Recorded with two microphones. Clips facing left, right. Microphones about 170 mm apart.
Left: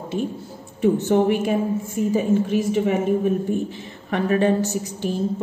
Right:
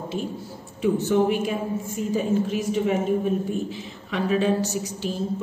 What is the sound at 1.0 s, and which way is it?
A woman's voice, 60° left (ahead or behind).